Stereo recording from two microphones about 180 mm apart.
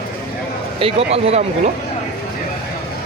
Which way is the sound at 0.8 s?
30° right (ahead or behind).